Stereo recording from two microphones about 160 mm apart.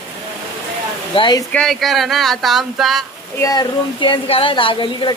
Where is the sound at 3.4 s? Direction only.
25° left (ahead or behind).